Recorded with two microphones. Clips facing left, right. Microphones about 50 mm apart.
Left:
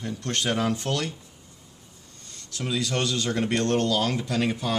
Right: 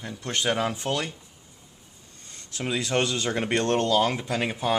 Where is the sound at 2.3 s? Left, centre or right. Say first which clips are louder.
Even; right.